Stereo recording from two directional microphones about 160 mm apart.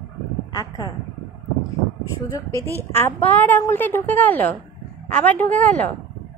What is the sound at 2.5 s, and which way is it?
Speech, 15° right (ahead or behind).